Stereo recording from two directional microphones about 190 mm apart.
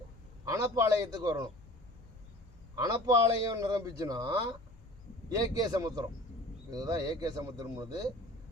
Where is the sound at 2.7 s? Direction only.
20° right (ahead or behind).